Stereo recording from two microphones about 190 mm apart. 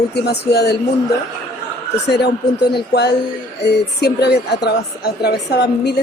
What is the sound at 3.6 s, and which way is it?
Speech, 60° left (ahead or behind).